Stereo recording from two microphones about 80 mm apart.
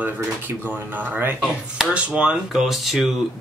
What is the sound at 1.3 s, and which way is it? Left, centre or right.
Speech, centre.